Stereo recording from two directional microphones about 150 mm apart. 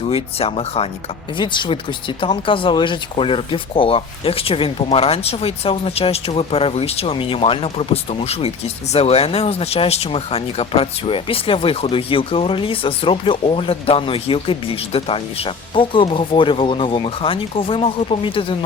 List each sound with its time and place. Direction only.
0.1 s speech: 40° left (ahead or behind)